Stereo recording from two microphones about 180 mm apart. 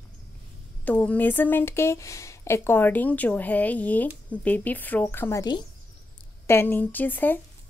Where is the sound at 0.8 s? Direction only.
10° left (ahead or behind).